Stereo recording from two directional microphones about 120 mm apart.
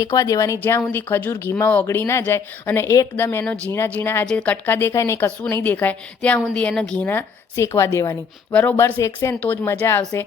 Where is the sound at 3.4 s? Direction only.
5° left (ahead or behind); by 9.3 s 25° left (ahead or behind).